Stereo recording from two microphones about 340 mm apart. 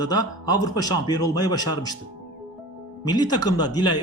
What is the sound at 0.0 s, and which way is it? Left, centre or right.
Speech, centre.